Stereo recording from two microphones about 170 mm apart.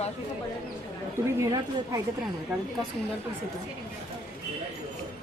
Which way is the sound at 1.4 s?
20° right (ahead or behind).